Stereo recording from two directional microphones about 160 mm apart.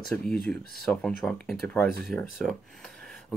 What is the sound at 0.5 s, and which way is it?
Speech, 5° left (ahead or behind).